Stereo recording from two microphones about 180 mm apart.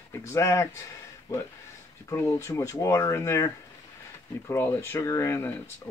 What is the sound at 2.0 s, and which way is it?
Speech, 15° left (ahead or behind).